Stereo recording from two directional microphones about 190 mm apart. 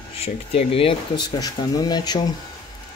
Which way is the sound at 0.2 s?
30° left (ahead or behind).